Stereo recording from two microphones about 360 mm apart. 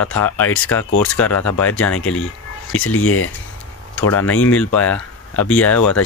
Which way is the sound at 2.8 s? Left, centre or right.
Left.